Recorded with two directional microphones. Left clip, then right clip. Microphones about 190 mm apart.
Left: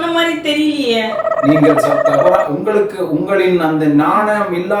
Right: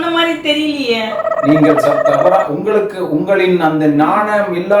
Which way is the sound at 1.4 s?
Centre (ahead or behind).